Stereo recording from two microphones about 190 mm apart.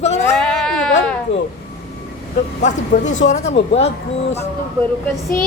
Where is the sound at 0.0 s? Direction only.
35° left (ahead or behind).